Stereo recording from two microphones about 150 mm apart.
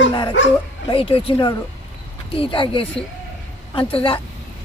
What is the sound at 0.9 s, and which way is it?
Speech, 35° left (ahead or behind).